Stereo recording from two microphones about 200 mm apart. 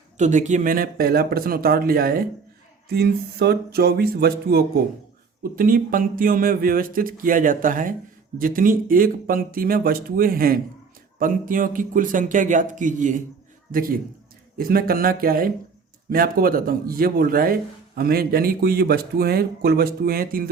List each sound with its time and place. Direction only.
0.2 s a man's voice: 35° right (ahead or behind)